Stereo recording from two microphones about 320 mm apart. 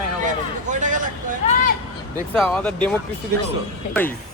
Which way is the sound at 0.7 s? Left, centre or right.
Right.